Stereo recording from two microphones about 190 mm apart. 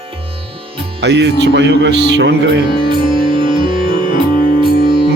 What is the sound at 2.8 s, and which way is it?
Music, 25° right (ahead or behind).